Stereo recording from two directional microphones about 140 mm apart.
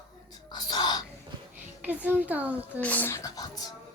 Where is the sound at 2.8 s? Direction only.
10° left (ahead or behind); by 3.7 s 25° left (ahead or behind).